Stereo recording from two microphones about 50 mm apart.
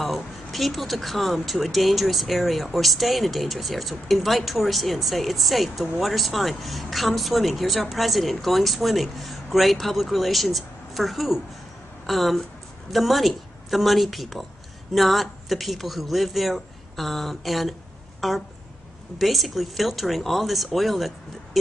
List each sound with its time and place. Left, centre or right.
0.0 s speech: centre